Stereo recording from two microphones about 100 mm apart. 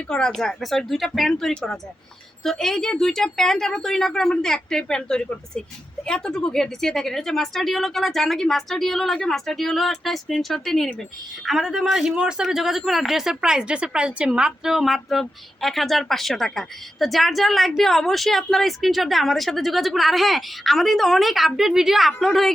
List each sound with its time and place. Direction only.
0.1 s a man's voice: 5° left (ahead or behind)